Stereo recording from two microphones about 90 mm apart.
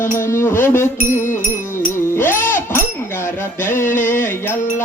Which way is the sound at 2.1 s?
30° left (ahead or behind).